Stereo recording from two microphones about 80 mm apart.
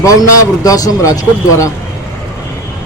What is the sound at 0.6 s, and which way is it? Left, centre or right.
Speech, left.